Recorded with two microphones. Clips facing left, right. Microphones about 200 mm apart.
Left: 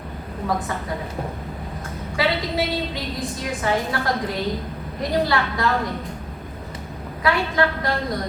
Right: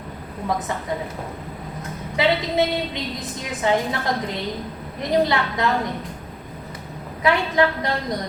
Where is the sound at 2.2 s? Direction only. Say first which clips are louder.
Right 3 dB; 20° right (ahead or behind).